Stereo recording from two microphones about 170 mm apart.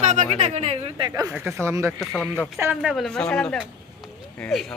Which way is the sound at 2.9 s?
Centre (ahead or behind).